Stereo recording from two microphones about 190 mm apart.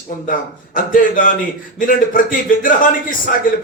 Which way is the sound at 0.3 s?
45° left (ahead or behind).